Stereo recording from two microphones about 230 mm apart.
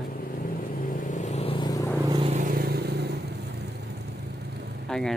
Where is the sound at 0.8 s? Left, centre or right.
Left; by 2.0 s centre.